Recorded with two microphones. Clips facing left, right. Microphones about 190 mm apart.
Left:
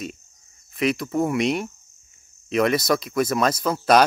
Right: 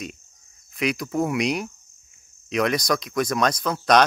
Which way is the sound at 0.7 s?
Centre (ahead or behind).